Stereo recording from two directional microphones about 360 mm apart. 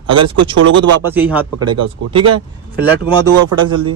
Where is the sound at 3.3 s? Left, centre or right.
Right.